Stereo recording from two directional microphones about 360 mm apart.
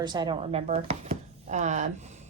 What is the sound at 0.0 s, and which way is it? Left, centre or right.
A woman's voice, centre.